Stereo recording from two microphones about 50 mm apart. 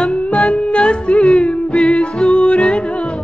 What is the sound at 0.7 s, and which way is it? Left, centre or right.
Music, left.